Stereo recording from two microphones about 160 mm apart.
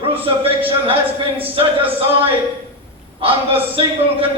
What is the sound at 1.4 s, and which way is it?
A man's voice, 35° right (ahead or behind).